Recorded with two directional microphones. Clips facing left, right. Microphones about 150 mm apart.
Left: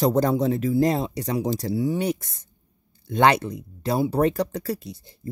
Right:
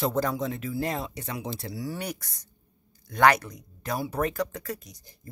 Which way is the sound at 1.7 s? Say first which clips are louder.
Left 11 dB; 25° left (ahead or behind).